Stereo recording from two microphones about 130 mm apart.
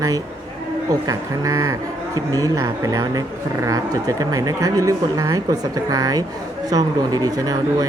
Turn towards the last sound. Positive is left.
turn(degrees=-30)  # may be behind; listen again after turning